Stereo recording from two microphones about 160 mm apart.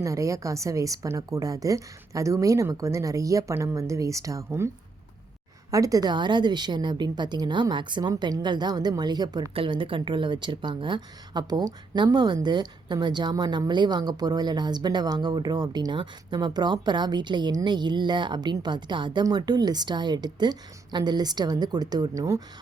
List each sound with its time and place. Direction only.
0.0 s a woman's voice: 20° right (ahead or behind)
5.7 s a woman's voice: 20° right (ahead or behind)